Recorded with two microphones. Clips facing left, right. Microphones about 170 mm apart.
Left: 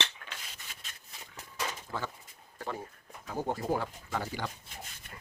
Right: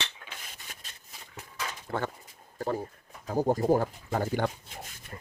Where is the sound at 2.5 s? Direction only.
40° right (ahead or behind).